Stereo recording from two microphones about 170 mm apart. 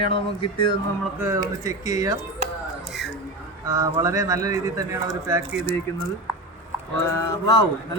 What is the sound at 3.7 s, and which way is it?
Speech, 20° right (ahead or behind).